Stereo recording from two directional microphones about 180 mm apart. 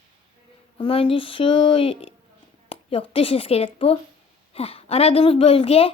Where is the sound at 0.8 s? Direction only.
30° left (ahead or behind).